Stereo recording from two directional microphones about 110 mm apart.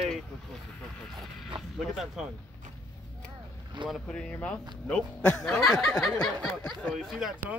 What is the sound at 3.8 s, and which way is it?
Speech, 45° right (ahead or behind).